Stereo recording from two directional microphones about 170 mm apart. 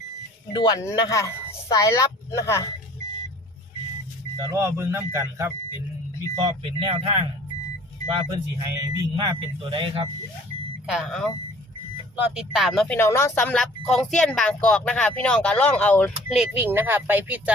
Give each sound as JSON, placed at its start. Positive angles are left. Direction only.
{"t": 0.5, "sound": "a woman's voice", "side_deg": 25}
{"t": 4.4, "sound": "speech", "side_deg": -20}
{"t": 6.3, "sound": "speech", "side_deg": -30}
{"t": 10.8, "sound": "speech", "side_deg": 0}
{"t": 13.0, "sound": "speech", "side_deg": 15}
{"t": 16.3, "sound": "speech", "side_deg": -5}